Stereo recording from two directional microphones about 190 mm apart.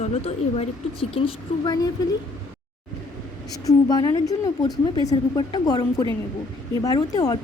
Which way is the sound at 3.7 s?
20° left (ahead or behind).